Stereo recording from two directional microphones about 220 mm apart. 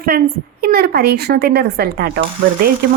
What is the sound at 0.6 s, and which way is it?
Speech, 45° right (ahead or behind).